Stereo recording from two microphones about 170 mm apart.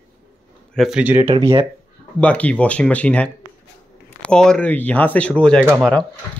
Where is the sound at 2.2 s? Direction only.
10° left (ahead or behind).